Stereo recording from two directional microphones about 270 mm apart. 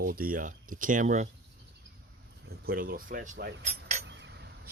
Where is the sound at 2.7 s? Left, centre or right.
Right.